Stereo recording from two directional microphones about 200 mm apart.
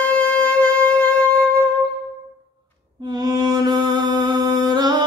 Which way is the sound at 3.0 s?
20° right (ahead or behind).